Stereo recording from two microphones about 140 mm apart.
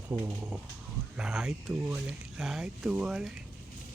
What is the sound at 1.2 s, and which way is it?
Speech, centre (ahead or behind).